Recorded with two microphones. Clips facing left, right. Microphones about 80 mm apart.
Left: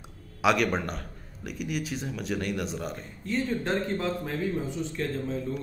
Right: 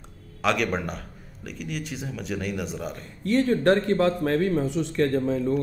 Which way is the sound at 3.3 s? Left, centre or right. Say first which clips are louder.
Right 8 dB; right.